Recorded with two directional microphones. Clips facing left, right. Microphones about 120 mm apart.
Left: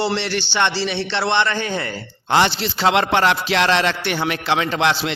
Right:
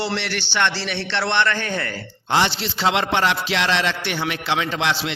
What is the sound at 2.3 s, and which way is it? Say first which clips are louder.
Music: left 3 dB; 50° left (ahead or behind).